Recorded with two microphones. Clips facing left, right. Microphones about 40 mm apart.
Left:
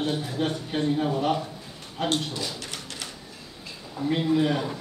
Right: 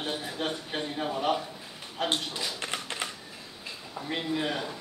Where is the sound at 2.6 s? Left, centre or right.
Right.